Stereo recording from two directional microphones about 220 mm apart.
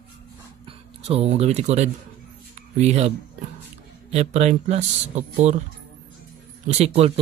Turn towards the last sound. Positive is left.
turn(degrees=-30)  # may be behind; listen again after turning